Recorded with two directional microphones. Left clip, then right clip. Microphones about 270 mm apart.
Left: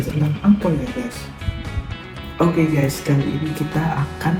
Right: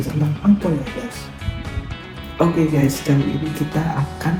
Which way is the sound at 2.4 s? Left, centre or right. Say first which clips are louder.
Right 1 dB; centre.